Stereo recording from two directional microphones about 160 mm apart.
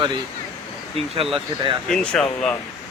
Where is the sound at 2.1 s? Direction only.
5° left (ahead or behind).